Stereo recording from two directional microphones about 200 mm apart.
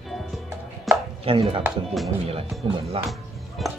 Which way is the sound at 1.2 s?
25° right (ahead or behind).